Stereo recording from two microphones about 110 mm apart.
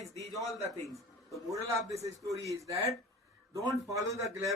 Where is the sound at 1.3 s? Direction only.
30° right (ahead or behind).